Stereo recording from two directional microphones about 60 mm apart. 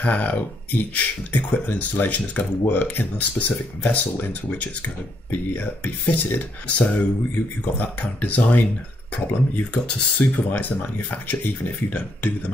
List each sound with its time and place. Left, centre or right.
0.0 s speech: left